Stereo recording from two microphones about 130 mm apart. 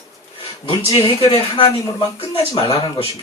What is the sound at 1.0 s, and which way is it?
Speech, 45° left (ahead or behind).